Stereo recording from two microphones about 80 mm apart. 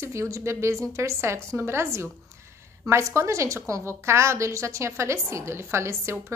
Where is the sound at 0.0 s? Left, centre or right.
Right.